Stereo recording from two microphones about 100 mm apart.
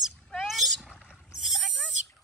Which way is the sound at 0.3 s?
Centre (ahead or behind).